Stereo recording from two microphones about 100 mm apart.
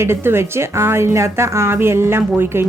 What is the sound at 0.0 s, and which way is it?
A woman's voice, 25° right (ahead or behind).